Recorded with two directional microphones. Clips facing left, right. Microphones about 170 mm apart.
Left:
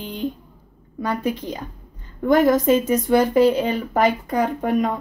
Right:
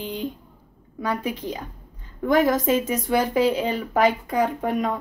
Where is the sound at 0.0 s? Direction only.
Centre (ahead or behind).